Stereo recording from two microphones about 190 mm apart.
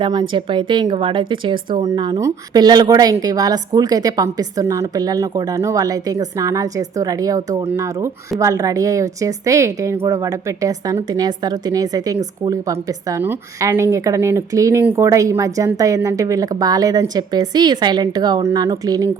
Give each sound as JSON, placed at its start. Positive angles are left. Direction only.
{"t": 0.0, "sound": "speech", "side_deg": -25}